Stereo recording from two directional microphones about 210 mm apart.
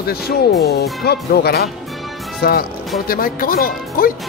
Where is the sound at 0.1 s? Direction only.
50° left (ahead or behind).